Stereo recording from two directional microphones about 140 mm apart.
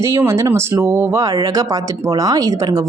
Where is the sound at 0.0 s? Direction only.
20° right (ahead or behind).